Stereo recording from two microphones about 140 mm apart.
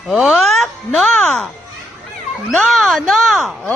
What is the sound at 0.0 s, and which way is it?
Speech, centre (ahead or behind).